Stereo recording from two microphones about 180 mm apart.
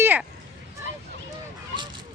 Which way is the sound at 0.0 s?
10° right (ahead or behind).